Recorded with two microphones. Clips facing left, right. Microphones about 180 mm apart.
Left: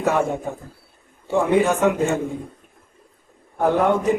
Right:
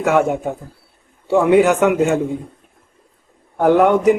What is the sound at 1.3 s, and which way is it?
Speech, 75° right (ahead or behind).